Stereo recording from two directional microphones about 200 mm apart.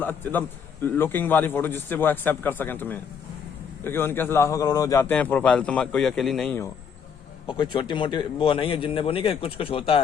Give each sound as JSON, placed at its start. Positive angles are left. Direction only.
{"t": 0.0, "sound": "a man's voice", "side_deg": 10}
{"t": 7.4, "sound": "a man's voice", "side_deg": 20}